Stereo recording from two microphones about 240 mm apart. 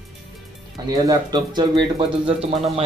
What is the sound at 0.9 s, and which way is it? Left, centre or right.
Speech, centre.